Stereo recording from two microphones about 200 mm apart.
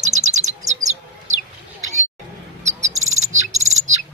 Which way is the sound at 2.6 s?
35° right (ahead or behind).